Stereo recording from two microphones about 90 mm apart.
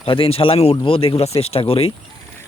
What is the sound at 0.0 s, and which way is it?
Speech, 85° left.